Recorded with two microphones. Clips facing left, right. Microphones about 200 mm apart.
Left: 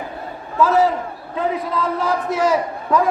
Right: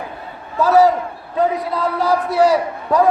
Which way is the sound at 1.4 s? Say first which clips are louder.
Right 5 dB; 40° right (ahead or behind).